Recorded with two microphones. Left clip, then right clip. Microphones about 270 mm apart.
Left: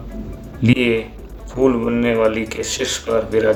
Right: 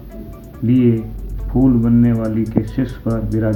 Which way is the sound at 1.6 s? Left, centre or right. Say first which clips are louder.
Even; left.